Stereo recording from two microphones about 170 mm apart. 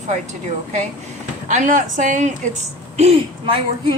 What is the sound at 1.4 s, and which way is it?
A woman's voice, 50° right (ahead or behind).